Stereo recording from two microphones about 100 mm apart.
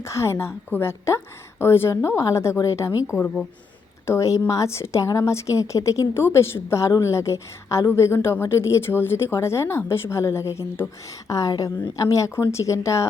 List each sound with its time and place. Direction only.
0.0 s a woman's voice: 30° left (ahead or behind)
3.2 s speech: 15° left (ahead or behind)
4.0 s a woman's voice: 30° left (ahead or behind)